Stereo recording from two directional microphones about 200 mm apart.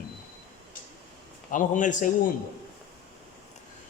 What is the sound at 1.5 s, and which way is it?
Speech, 40° left (ahead or behind).